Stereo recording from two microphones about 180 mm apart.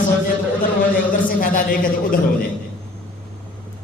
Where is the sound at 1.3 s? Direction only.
50° left (ahead or behind).